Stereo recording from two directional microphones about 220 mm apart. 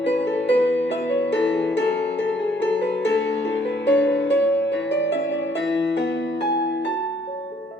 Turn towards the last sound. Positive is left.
turn(degrees=50)  # may be behind; listen again after turning